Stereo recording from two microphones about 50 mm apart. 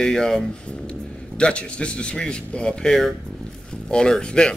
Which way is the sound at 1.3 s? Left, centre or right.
Left.